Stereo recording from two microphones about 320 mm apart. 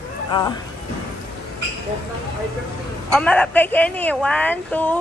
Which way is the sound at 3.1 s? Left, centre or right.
Centre.